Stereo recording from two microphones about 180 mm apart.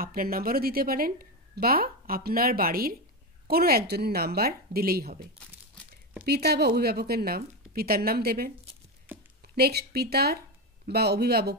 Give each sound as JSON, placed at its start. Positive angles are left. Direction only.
{"t": 0.0, "sound": "a woman's voice", "side_deg": -55}
{"t": 6.2, "sound": "a woman's voice", "side_deg": -65}
{"t": 9.1, "sound": "a sound", "side_deg": -10}
{"t": 9.6, "sound": "a woman's voice", "side_deg": -60}